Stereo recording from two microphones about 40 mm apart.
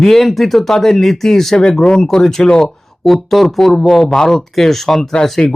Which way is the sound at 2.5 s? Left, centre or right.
Left.